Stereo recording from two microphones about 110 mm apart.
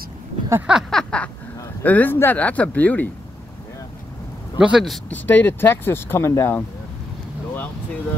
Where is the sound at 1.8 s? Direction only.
15° left (ahead or behind).